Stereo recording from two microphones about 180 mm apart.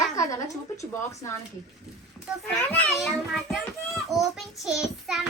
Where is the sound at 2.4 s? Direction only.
10° left (ahead or behind).